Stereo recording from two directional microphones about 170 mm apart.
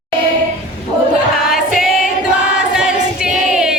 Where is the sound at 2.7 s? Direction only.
5° right (ahead or behind).